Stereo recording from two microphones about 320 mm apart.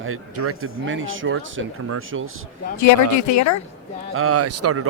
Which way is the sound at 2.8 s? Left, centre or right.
Left.